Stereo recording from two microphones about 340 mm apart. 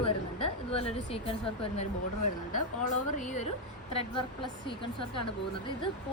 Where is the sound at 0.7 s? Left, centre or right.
Centre.